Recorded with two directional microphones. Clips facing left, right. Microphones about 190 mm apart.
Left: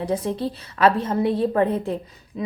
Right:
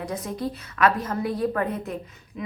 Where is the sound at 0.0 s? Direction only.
30° left (ahead or behind).